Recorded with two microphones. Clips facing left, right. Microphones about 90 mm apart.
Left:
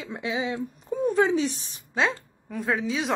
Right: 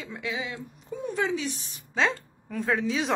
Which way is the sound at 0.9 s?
40° left (ahead or behind).